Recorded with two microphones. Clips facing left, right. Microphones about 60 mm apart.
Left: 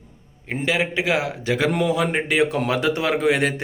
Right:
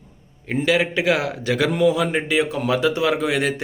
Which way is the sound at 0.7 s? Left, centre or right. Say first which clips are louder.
Right 2 dB; left.